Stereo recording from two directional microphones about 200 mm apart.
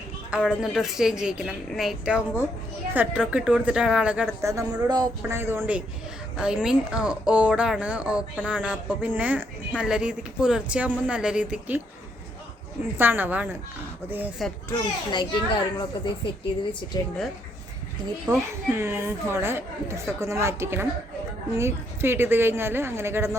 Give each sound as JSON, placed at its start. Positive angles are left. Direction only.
{"t": 0.3, "sound": "a woman's voice", "side_deg": -5}
{"t": 13.0, "sound": "speech", "side_deg": -10}
{"t": 14.7, "sound": "a child's voice", "side_deg": 20}
{"t": 18.3, "sound": "speech", "side_deg": -20}